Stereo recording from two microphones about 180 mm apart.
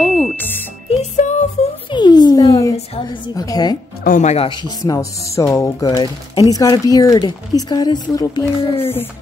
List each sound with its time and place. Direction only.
0.0 s music: centre (ahead or behind)
0.8 s music: 40° left (ahead or behind)
1.9 s a sound: 25° left (ahead or behind)
2.7 s a woman's voice: 25° left (ahead or behind)
4.0 s speech: 45° left (ahead or behind)
4.5 s speech: 20° left (ahead or behind)